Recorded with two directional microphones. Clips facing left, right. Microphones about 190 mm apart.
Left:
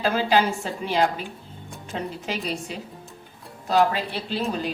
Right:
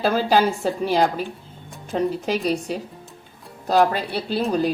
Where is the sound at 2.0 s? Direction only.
40° right (ahead or behind).